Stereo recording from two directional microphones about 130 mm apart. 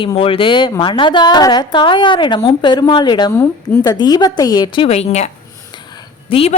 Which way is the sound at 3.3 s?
20° left (ahead or behind).